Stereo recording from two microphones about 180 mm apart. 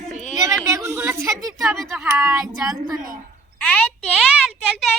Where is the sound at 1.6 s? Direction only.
Centre (ahead or behind).